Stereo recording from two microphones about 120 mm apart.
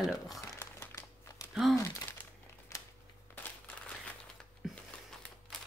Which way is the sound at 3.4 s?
10° left (ahead or behind).